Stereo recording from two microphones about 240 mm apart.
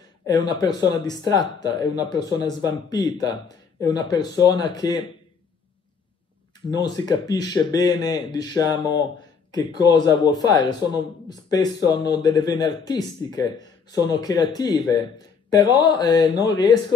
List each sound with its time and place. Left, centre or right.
0.3 s speech: centre
6.7 s speech: centre